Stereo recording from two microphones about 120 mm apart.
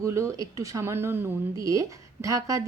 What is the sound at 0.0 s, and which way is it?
A woman's voice, 25° right (ahead or behind).